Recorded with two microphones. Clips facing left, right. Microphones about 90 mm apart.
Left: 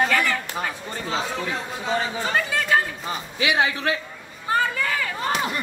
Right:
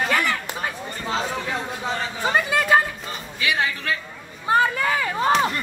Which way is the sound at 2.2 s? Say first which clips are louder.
Right 3 dB; 15° right (ahead or behind).